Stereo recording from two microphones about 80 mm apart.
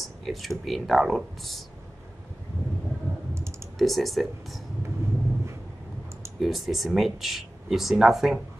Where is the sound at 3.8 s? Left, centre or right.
Centre.